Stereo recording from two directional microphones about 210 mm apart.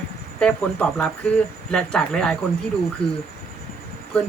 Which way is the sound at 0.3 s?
5° left (ahead or behind).